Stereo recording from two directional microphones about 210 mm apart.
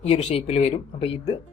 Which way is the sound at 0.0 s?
30° left (ahead or behind).